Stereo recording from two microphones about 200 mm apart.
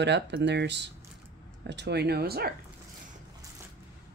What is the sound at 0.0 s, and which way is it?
Speech, 60° right (ahead or behind).